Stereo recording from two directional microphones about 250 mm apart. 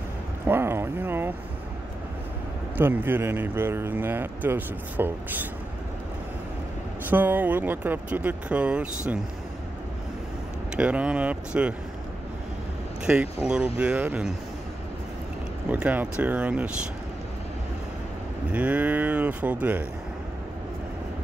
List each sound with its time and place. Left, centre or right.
0.5 s a sound: centre
2.8 s speech: centre
7.1 s speech: centre
10.8 s speech: centre
13.0 s speech: centre
15.7 s speech: centre
18.5 s speech: centre